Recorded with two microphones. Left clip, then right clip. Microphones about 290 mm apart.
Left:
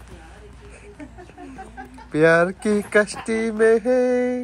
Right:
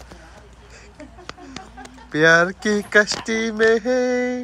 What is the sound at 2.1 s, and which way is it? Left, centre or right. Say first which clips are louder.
Mantra: right 1 dB; centre.